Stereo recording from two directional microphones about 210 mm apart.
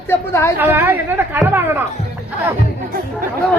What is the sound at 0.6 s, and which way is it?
A woman's voice, 10° right (ahead or behind).